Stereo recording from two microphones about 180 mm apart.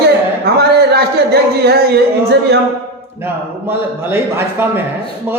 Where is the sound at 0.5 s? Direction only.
60° right (ahead or behind).